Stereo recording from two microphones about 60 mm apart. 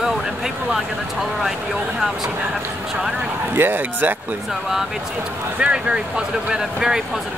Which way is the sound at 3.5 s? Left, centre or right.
Right.